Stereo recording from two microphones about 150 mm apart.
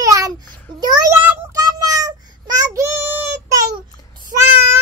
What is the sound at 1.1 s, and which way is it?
Child singing, 10° right (ahead or behind).